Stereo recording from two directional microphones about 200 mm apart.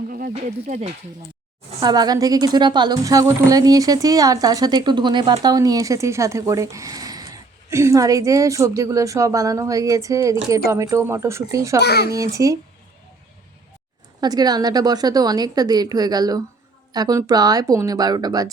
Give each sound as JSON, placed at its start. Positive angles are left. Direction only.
{"t": 0.1, "sound": "speech", "side_deg": -45}
{"t": 1.8, "sound": "a woman's voice", "side_deg": -20}
{"t": 11.8, "sound": "a child's voice", "side_deg": 55}
{"t": 12.1, "sound": "a woman's voice", "side_deg": -15}
{"t": 14.2, "sound": "a woman's voice", "side_deg": -20}